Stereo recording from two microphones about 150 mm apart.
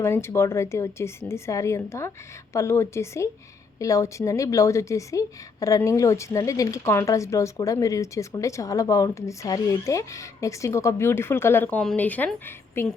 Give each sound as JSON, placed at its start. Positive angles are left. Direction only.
{"t": 0.0, "sound": "a woman's voice", "side_deg": 15}